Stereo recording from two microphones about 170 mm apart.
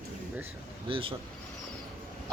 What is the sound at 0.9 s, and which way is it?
Speech, 35° right (ahead or behind).